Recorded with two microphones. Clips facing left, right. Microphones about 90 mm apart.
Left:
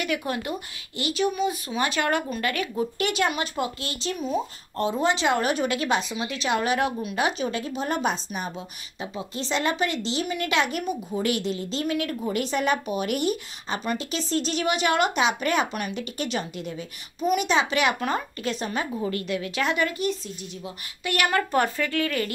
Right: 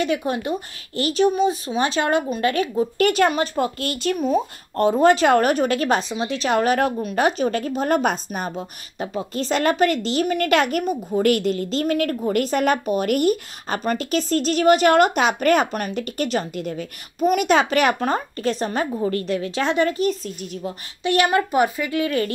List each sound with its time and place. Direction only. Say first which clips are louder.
0.0 s speech: right 5 dB; 25° right (ahead or behind)
0.9 s speech: right 7 dB; 40° right (ahead or behind)
3.0 s speech: right 8 dB; 45° right (ahead or behind)
3.8 s speech: right 7 dB; 55° right (ahead or behind); by 20.2 s 35° right (ahead or behind)
21.0 s speech: right 6 dB; 25° right (ahead or behind)
21.5 s speech: right 4 dB; 10° right (ahead or behind)